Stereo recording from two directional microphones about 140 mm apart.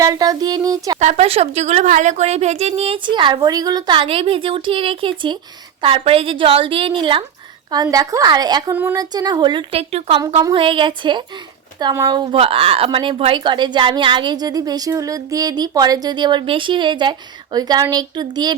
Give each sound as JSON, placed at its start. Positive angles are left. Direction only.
{"t": 0.0, "sound": "a woman's voice", "side_deg": -25}
{"t": 0.9, "sound": "a woman's voice", "side_deg": -55}
{"t": 7.7, "sound": "a woman's voice", "side_deg": -25}
{"t": 8.7, "sound": "a woman's voice", "side_deg": -15}
{"t": 9.0, "sound": "a woman's voice", "side_deg": -30}